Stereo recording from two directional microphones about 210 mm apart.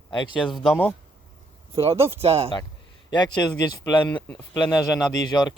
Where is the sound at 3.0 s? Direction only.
20° left (ahead or behind).